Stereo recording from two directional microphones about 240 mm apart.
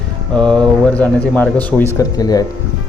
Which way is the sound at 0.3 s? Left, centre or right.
Centre.